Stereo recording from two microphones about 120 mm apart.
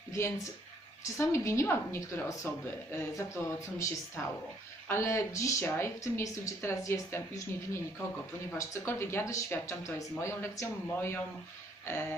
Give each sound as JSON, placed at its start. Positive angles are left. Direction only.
{"t": 0.1, "sound": "a woman's voice", "side_deg": 25}